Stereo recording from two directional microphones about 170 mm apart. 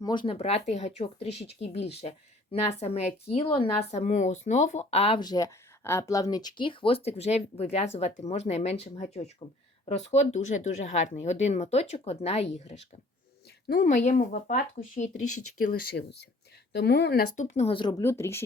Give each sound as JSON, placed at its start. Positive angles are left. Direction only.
{"t": 0.0, "sound": "speech", "side_deg": 25}
{"t": 13.8, "sound": "speech", "side_deg": 45}
{"t": 15.6, "sound": "speech", "side_deg": 60}
{"t": 17.3, "sound": "speech", "side_deg": 45}